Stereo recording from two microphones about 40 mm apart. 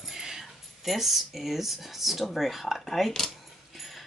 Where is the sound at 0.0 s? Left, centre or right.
Centre.